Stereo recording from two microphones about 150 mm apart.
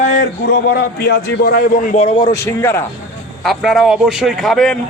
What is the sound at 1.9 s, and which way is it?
Speech, 40° left (ahead or behind).